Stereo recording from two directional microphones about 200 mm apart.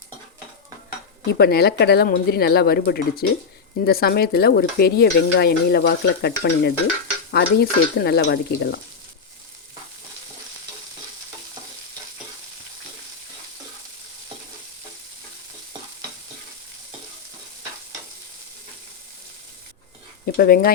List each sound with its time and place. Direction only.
1.3 s stir: 50° left (ahead or behind)
20.2 s speech: 50° left (ahead or behind)